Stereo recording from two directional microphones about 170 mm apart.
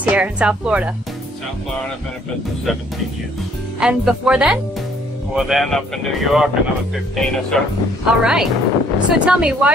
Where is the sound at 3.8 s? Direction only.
5° right (ahead or behind).